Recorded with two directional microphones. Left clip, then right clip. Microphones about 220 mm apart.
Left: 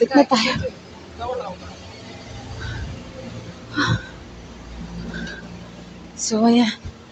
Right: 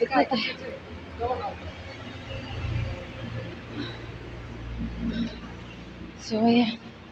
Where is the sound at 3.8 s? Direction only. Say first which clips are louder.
Left 16 dB; 30° left (ahead or behind).